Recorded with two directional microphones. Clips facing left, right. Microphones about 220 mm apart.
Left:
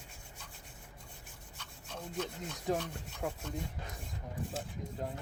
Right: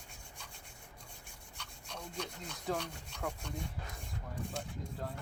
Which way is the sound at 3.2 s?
20° left (ahead or behind).